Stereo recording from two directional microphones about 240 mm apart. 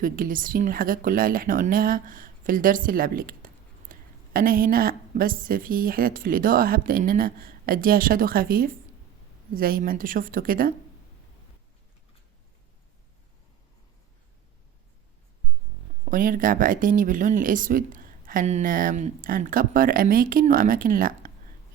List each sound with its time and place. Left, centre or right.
0.0 s speech: right
16.0 s speech: right